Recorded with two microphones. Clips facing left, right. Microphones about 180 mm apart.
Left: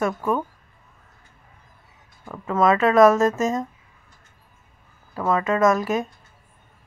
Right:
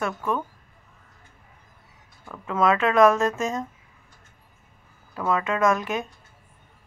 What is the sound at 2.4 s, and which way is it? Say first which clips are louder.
Speech: left 3 dB; 5° left (ahead or behind).